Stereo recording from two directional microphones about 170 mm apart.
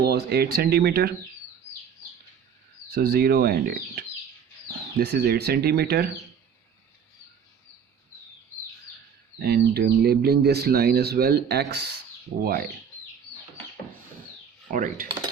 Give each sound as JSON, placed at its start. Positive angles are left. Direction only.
{"t": 0.0, "sound": "speech", "side_deg": -70}
{"t": 2.9, "sound": "speech", "side_deg": -65}
{"t": 9.4, "sound": "speech", "side_deg": -70}
{"t": 14.7, "sound": "cutlery", "side_deg": -50}